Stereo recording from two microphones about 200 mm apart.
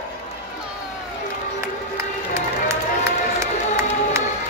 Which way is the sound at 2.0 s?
15° right (ahead or behind).